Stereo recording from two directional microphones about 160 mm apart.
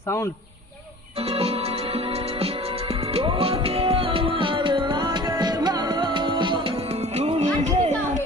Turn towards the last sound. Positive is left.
turn(degrees=-45)  # may be behind; listen again after turning